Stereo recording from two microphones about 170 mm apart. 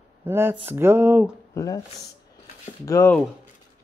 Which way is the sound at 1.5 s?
20° left (ahead or behind).